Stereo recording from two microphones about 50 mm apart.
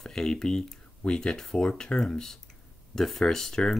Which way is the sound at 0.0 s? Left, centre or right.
Centre.